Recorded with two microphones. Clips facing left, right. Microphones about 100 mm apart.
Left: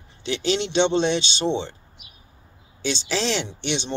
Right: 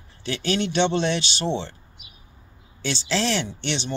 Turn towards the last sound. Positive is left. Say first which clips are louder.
# left 1 dB
turn(degrees=15)  # may be behind; listen again after turning